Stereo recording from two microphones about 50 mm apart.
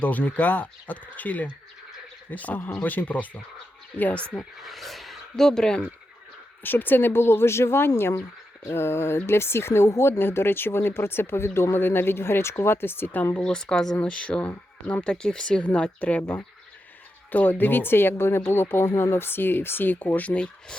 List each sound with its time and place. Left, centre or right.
0.0 s speech: left
4.6 s a sound: centre
5.5 s speech: centre
6.6 s speech: left
13.4 s speech: centre
13.9 s speech: left
17.3 s speech: left
20.1 s speech: left